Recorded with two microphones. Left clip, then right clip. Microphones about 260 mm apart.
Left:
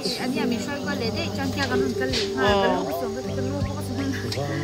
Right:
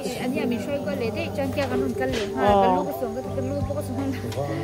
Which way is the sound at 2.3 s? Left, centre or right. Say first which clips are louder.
Right 3 dB; centre.